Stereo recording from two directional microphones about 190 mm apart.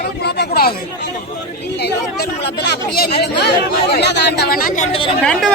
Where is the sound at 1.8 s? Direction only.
60° left (ahead or behind); by 4.9 s 40° left (ahead or behind).